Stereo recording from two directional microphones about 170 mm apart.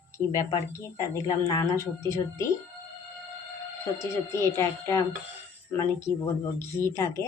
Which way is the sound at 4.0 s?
15° left (ahead or behind).